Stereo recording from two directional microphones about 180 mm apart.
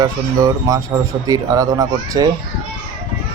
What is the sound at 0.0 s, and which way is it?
A man's voice, 20° right (ahead or behind).